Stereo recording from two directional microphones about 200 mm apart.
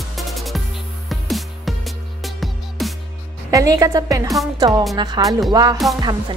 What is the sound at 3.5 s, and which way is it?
A woman's voice, 15° right (ahead or behind).